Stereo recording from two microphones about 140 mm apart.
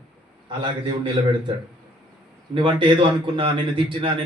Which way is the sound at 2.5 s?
35° right (ahead or behind).